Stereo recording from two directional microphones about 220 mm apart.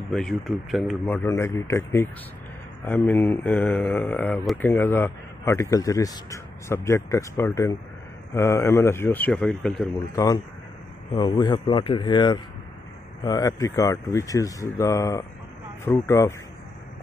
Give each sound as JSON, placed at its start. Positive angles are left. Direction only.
{"t": 0.1, "sound": "speech", "side_deg": 0}
{"t": 10.1, "sound": "speech", "side_deg": 15}